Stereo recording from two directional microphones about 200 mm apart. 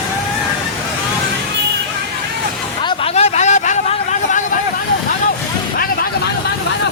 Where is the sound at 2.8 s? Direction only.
30° left (ahead or behind).